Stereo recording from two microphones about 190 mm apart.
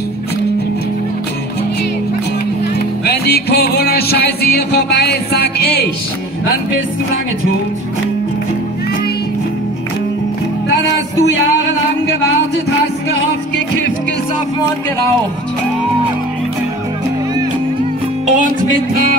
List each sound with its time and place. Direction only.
3.1 s music: 55° left (ahead or behind)
18.2 s music: 45° right (ahead or behind)